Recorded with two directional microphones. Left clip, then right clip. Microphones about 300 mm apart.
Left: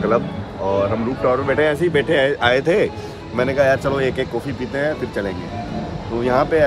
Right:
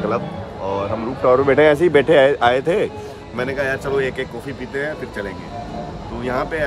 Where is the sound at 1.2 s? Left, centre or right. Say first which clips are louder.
Right 5 dB; right.